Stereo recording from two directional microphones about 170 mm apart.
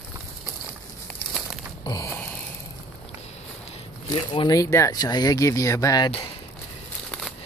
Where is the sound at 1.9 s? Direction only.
20° left (ahead or behind).